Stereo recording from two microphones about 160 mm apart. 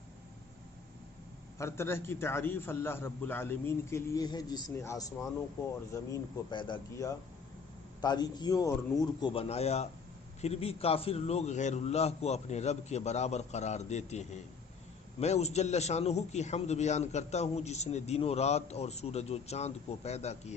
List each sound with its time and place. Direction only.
1.5 s a man's voice: 15° left (ahead or behind)
9.3 s a man's voice: 40° left (ahead or behind)